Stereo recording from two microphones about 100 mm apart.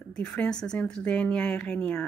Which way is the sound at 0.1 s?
10° left (ahead or behind).